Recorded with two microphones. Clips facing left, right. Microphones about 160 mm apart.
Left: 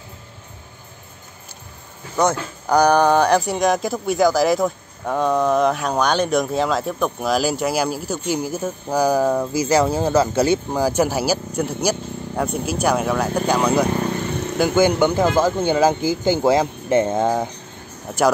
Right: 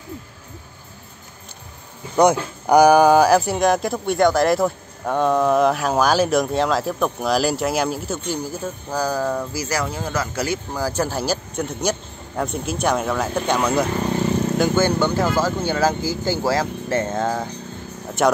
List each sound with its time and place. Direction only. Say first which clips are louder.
2.1 s speech: right 4 dB; 15° right (ahead or behind)
14.6 s speech: left 5 dB; 15° left (ahead or behind)